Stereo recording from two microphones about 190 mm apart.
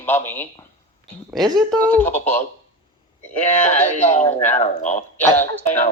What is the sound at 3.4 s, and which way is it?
Speech, 40° left (ahead or behind).